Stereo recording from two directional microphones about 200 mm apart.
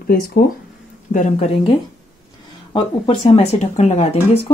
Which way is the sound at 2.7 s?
30° left (ahead or behind).